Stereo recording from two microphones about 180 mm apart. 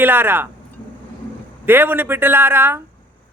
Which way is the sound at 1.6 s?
10° right (ahead or behind).